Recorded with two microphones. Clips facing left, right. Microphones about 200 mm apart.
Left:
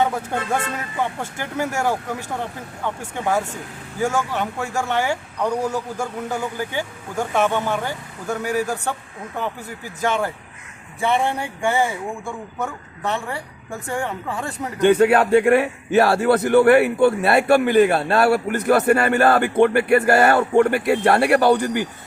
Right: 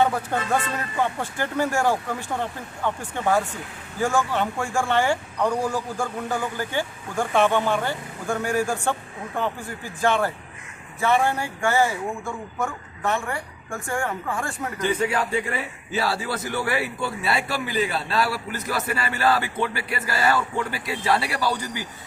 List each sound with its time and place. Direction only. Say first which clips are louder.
0.3 s a woman's voice: left 1 dB; 10° left (ahead or behind)
14.8 s a man's voice: left 10 dB; 65° left (ahead or behind)